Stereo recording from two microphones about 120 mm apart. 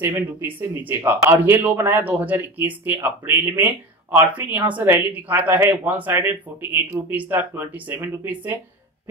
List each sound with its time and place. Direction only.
0.0 s speech: 20° right (ahead or behind)